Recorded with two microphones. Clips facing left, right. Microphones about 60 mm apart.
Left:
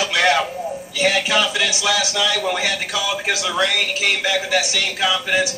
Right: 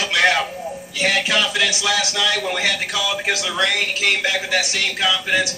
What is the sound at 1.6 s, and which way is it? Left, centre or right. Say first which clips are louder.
A man's voice: even; centre.